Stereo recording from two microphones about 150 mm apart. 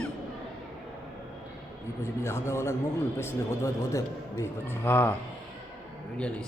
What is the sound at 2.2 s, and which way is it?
A man's voice, 20° left (ahead or behind).